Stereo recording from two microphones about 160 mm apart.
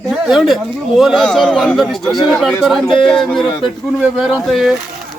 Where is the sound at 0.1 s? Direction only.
Centre (ahead or behind).